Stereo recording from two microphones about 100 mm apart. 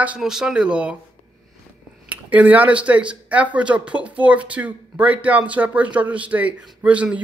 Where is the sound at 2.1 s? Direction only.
15° right (ahead or behind).